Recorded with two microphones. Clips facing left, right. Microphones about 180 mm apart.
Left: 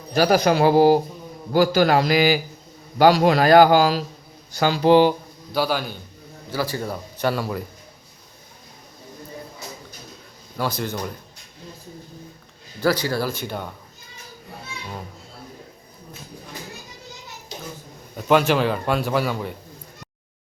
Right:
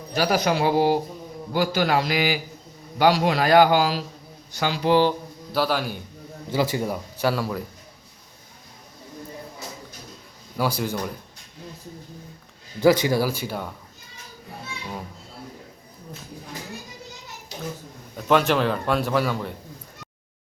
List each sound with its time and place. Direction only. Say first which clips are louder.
0.2 s a man's voice: left 5 dB; 45° left (ahead or behind)
5.5 s a man's voice: left 1 dB; centre (ahead or behind)
6.5 s a man's voice: right 2 dB; 20° right (ahead or behind); by 7.6 s centre (ahead or behind)
10.6 s a man's voice: right 1 dB; 10° right (ahead or behind)
12.8 s a man's voice: right 3 dB; 20° right (ahead or behind); by 13.7 s 5° right (ahead or behind)
18.2 s a man's voice: left 2 dB; centre (ahead or behind)